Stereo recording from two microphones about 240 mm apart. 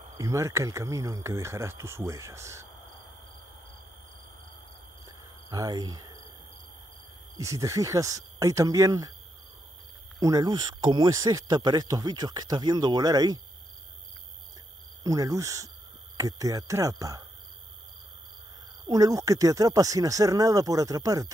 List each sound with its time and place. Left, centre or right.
0.2 s speech: centre
5.0 s a sound: centre
7.3 s speech: centre
10.2 s speech: centre
15.0 s speech: centre
18.9 s speech: centre